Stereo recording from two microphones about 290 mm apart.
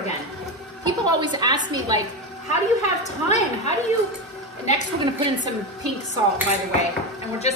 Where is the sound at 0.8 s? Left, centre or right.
Centre.